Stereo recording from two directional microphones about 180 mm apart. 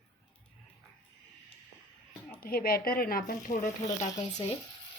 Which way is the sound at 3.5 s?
30° left (ahead or behind).